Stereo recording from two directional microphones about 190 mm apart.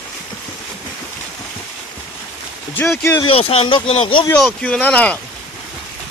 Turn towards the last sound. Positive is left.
turn(degrees=5)  # may be behind; listen again after turning